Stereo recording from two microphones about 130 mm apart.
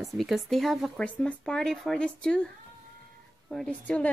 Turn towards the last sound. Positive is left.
turn(degrees=10)  # may be behind; listen again after turning